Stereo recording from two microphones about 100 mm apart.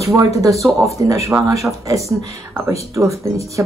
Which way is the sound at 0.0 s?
30° right (ahead or behind).